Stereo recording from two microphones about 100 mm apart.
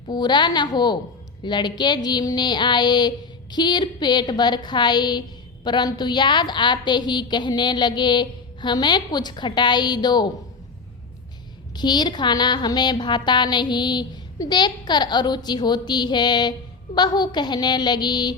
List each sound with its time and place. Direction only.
0.1 s a woman's voice: 45° left (ahead or behind)
11.8 s a woman's voice: 45° left (ahead or behind)